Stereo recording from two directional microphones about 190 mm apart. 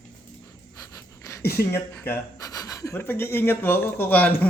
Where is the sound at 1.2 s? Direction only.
15° left (ahead or behind).